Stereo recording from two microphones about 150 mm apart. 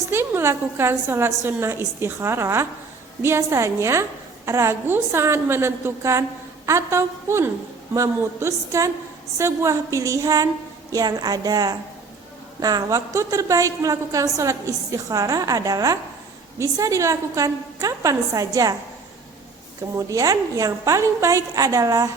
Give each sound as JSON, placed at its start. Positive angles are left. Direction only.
{"t": 0.1, "sound": "a woman's voice", "side_deg": -15}
{"t": 20.0, "sound": "a woman's voice", "side_deg": -20}